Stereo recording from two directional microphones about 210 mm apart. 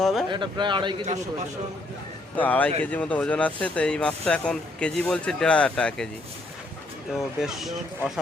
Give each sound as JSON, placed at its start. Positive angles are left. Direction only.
{"t": 0.0, "sound": "speech", "side_deg": 0}
{"t": 0.3, "sound": "speech", "side_deg": -20}
{"t": 2.3, "sound": "a man's voice", "side_deg": 10}
{"t": 7.1, "sound": "speech", "side_deg": 0}